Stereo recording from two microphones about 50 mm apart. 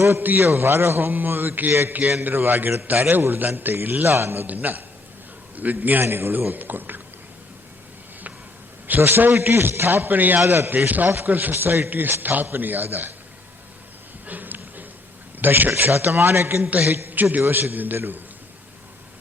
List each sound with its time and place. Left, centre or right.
0.2 s a man's voice: right
0.4 s a man's voice: right
4.1 s a man's voice: right
4.4 s a man's voice: right
6.0 s a man's voice: right
6.3 s a man's voice: right
9.0 s a man's voice: right
14.3 s a sound: right
15.4 s a man's voice: right